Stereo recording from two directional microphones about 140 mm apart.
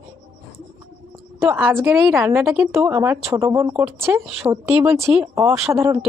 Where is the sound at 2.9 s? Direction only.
20° right (ahead or behind).